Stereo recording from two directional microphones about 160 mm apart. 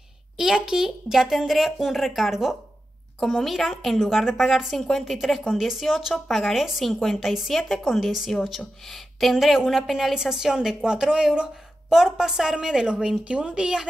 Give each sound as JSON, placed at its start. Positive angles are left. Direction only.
{"t": 0.4, "sound": "a woman's voice", "side_deg": -5}